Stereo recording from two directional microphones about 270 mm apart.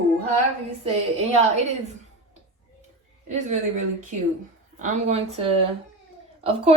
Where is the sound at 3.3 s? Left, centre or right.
Right.